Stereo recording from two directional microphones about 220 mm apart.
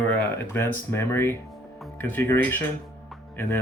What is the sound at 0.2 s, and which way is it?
Speech, 10° left (ahead or behind).